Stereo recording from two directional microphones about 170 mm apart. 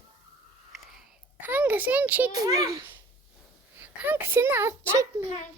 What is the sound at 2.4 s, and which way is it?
A child's voice, 20° right (ahead or behind).